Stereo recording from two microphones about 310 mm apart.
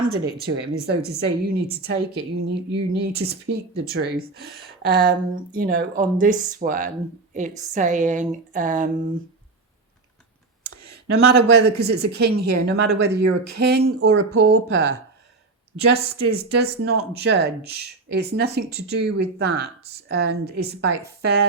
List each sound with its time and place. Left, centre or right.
0.0 s speech: right
11.3 s speech: right
16.0 s speech: right